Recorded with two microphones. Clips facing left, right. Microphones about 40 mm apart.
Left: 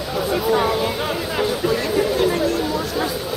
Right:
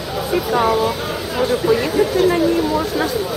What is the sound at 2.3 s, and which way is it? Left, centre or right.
Chatter, centre.